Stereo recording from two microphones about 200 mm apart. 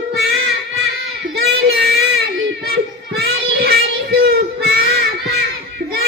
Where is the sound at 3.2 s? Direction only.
50° right (ahead or behind).